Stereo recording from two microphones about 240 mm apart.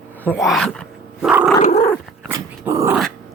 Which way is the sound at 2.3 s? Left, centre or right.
Centre.